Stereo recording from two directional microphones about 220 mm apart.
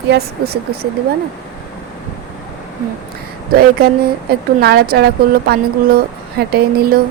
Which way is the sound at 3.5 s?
45° right (ahead or behind).